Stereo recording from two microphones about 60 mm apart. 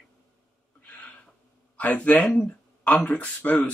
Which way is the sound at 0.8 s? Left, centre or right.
Left.